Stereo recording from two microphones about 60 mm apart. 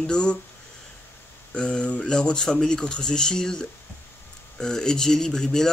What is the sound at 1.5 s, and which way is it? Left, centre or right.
A man's voice, centre.